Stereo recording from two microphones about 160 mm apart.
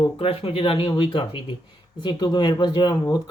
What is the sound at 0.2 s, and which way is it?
Speech, 35° left (ahead or behind).